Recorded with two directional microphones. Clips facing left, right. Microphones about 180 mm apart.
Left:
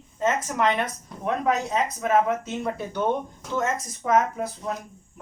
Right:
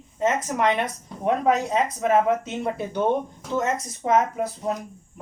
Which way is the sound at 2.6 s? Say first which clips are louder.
Right 2 dB; 25° right (ahead or behind).